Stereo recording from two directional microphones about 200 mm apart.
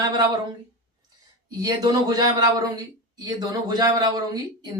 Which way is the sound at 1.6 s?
20° right (ahead or behind).